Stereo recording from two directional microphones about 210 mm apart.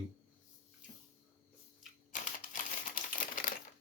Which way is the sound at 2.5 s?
40° left (ahead or behind).